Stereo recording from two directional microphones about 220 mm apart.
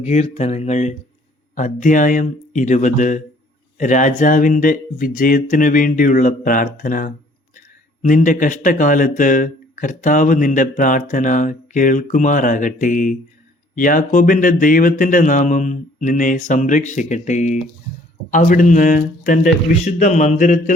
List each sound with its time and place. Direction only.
0.0 s speech: 30° left (ahead or behind)